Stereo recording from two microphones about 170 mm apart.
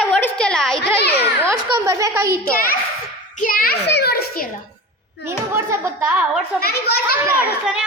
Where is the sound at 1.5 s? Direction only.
15° right (ahead or behind).